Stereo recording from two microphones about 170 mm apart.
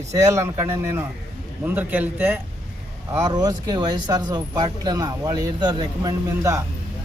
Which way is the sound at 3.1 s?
20° right (ahead or behind).